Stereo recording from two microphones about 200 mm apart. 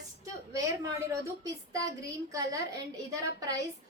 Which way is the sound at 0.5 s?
15° right (ahead or behind).